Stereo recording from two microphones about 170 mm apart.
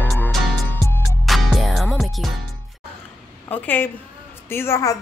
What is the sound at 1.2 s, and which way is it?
Music, centre (ahead or behind).